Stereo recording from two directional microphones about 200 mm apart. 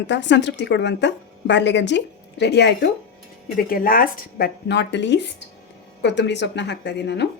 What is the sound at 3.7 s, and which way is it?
A woman's voice, 45° left (ahead or behind).